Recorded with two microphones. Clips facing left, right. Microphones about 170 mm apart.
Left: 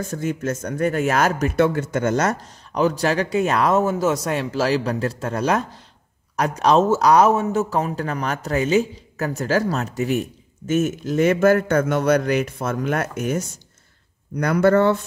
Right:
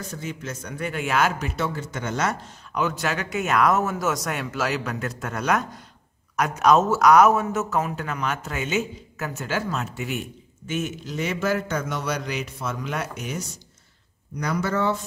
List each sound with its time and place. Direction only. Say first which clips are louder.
0.0 s a man's voice: left 8 dB; 50° left (ahead or behind)